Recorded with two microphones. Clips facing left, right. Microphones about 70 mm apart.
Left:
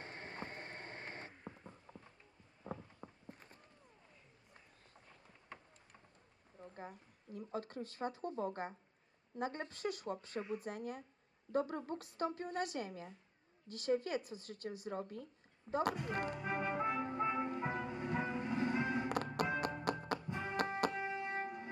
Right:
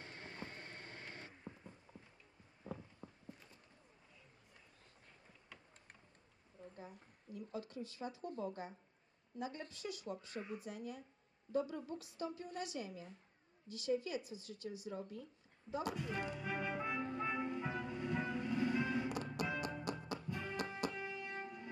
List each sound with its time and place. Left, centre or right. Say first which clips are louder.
0.0 s a sound: left 3 dB; left
3.2 s a sound: left 1 dB; left
5.5 s a sound: left 5 dB; left
7.3 s speech: left 3 dB; left
17.0 s music: left 3 dB; left
17.2 s music: left 3 dB; left
19.0 s music: left 4 dB; left
20.2 s music: left 2 dB; left
20.6 s music: left 7 dB; left
20.9 s music: left 5 dB; left